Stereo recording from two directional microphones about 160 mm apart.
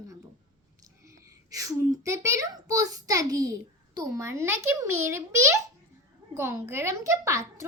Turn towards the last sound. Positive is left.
turn(degrees=-20)  # may be behind; listen again after turning